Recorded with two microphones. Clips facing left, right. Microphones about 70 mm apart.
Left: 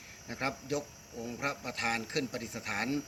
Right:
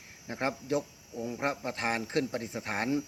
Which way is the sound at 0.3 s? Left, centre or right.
Right.